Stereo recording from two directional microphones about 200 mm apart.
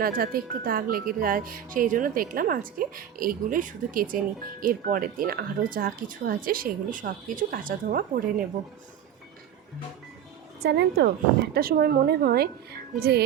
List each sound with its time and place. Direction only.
0.0 s speech: 45° right (ahead or behind)
10.6 s speech: 55° right (ahead or behind)